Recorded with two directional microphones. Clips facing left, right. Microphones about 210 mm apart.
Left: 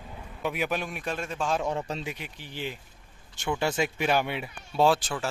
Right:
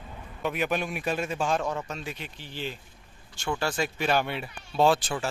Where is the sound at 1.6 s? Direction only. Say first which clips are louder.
Left 2 dB; 30° left (ahead or behind).